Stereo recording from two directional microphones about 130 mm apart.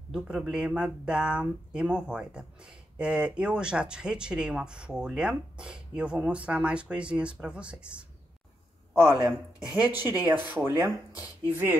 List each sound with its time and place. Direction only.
0.4 s speech: 5° right (ahead or behind)
9.1 s speech: 30° right (ahead or behind)
9.8 s speech: 15° right (ahead or behind)